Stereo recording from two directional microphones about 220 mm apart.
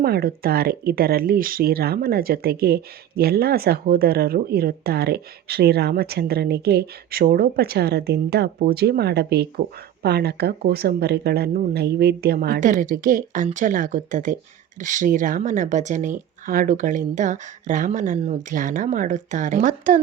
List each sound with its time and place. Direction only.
0.0 s speech: 45° right (ahead or behind)